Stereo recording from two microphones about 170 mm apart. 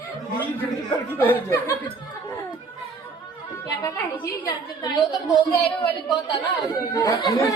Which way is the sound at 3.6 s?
20° left (ahead or behind).